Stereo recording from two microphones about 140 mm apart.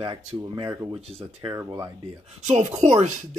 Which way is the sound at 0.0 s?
30° right (ahead or behind).